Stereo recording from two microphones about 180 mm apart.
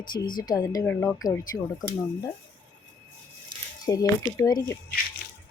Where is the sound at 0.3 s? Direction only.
50° left (ahead or behind).